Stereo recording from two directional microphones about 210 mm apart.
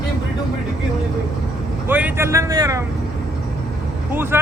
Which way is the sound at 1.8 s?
10° right (ahead or behind).